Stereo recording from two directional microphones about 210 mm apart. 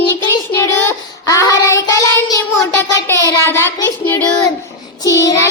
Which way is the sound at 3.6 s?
10° left (ahead or behind).